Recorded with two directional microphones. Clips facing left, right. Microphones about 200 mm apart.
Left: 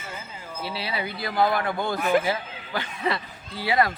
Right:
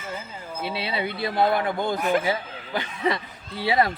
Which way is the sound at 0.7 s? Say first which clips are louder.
Right 3 dB; 25° right (ahead or behind).